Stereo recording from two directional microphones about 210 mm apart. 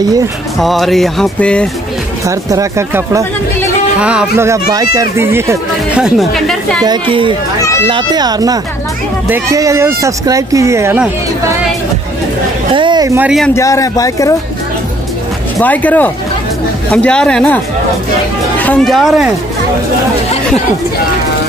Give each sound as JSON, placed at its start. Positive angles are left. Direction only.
{"t": 0.6, "sound": "speech", "side_deg": 0}
{"t": 2.2, "sound": "speech", "side_deg": -15}
{"t": 6.8, "sound": "speech", "side_deg": -20}
{"t": 12.7, "sound": "speech", "side_deg": -20}
{"t": 13.5, "sound": "speech", "side_deg": 15}
{"t": 15.6, "sound": "speech", "side_deg": 10}
{"t": 18.6, "sound": "speech", "side_deg": 5}